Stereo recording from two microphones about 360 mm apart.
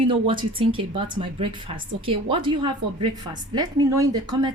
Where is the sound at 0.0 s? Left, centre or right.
Centre.